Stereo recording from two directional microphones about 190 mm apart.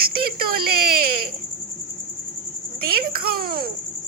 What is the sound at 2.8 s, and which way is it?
Speech, 50° right (ahead or behind).